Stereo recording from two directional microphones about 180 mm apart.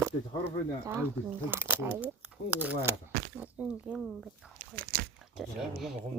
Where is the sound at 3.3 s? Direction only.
10° right (ahead or behind).